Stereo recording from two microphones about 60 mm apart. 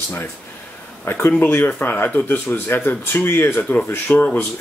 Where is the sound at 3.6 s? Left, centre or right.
Left.